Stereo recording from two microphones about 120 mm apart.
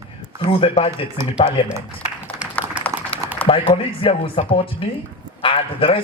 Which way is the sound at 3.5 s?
45° left (ahead or behind).